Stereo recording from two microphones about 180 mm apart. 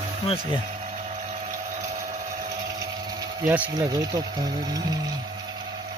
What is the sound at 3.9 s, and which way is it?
Speech, 20° right (ahead or behind).